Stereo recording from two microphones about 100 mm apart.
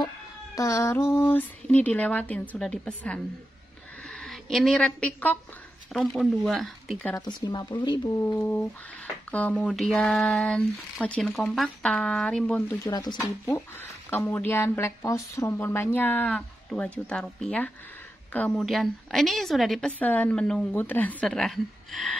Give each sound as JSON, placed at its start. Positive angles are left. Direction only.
{"t": 0.6, "sound": "a woman's voice", "side_deg": 30}
{"t": 7.2, "sound": "speech", "side_deg": 45}
{"t": 8.2, "sound": "speech", "side_deg": 25}
{"t": 11.5, "sound": "a woman's voice", "side_deg": 0}
{"t": 12.8, "sound": "speech", "side_deg": 45}
{"t": 13.5, "sound": "a woman's voice", "side_deg": 25}
{"t": 20.0, "sound": "speech", "side_deg": 15}
{"t": 20.7, "sound": "speech", "side_deg": 20}